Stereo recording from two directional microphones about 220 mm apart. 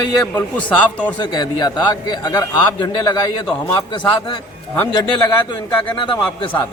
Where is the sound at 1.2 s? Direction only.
20° left (ahead or behind).